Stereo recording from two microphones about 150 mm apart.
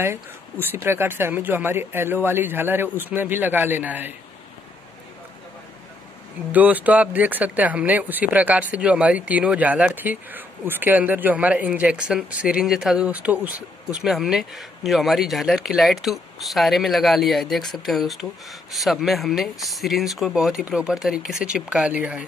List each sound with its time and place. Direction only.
0.0 s speech: 15° right (ahead or behind)
6.5 s speech: 10° right (ahead or behind)